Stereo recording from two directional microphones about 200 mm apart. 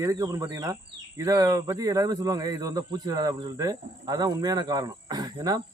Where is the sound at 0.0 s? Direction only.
15° right (ahead or behind).